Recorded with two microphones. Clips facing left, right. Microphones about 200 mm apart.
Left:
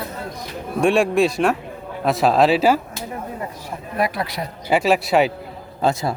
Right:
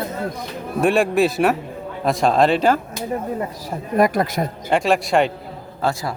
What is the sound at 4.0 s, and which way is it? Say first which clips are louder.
Speech: right 6 dB; 45° right (ahead or behind).